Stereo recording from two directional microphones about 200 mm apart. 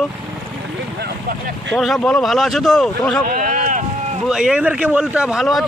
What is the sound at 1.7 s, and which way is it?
A man's voice, centre (ahead or behind).